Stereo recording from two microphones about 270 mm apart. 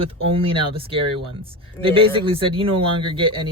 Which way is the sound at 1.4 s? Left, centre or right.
Centre.